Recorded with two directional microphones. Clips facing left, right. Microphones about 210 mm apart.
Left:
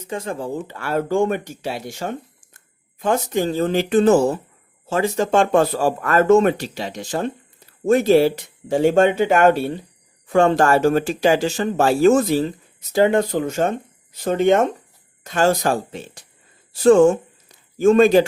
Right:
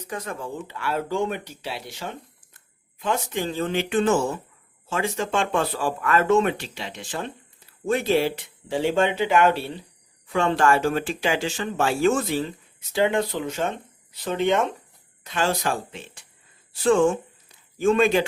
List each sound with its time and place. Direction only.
0.0 s speech: 25° left (ahead or behind)